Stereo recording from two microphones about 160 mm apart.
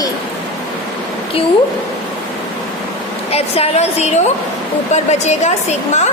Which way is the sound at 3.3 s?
40° left (ahead or behind).